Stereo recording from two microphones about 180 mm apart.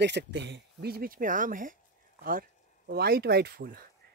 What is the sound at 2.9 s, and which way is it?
Speech, 60° right (ahead or behind).